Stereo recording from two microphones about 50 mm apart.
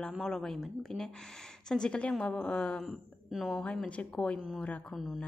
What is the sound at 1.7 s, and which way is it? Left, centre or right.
A woman's voice, centre.